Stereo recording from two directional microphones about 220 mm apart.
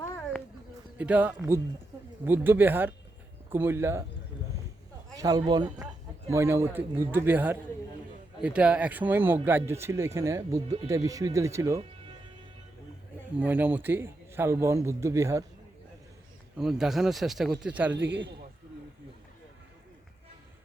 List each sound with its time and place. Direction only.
0.0 s a sound: 10° left (ahead or behind)
0.9 s speech: 5° right (ahead or behind)
5.1 s speech: 15° right (ahead or behind)
13.4 s speech: 10° right (ahead or behind)
16.6 s speech: centre (ahead or behind)
17.9 s a man's voice: 55° right (ahead or behind)